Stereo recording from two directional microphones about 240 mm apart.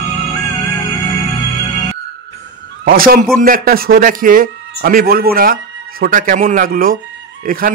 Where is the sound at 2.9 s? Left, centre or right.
Right.